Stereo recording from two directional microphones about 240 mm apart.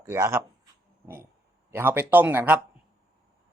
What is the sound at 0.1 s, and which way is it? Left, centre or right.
Speech, centre.